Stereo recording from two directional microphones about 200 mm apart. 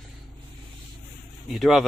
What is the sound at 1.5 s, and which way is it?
Speech, centre (ahead or behind).